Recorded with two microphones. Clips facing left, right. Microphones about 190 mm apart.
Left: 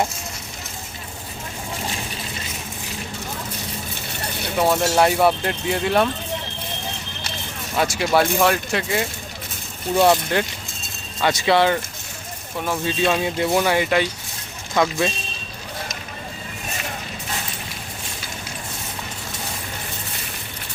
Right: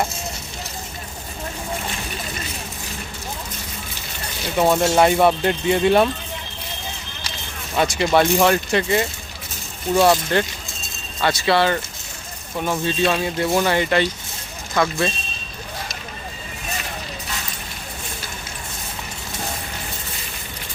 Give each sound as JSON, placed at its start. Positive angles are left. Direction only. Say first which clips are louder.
{"t": 4.5, "sound": "speech", "louder": "right 2 dB", "side_deg": 0}
{"t": 7.8, "sound": "speech", "louder": "right 2 dB", "side_deg": 0}
{"t": 10.3, "sound": "speech", "louder": "right 2 dB", "side_deg": 10}
{"t": 12.5, "sound": "speech", "louder": "right 2 dB", "side_deg": -5}
{"t": 13.1, "sound": "speech", "louder": "left 2 dB", "side_deg": 15}